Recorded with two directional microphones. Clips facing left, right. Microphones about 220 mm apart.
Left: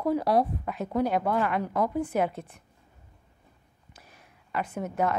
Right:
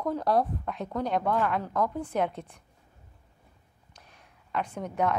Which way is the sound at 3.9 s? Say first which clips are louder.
Left 1 dB; 5° left (ahead or behind).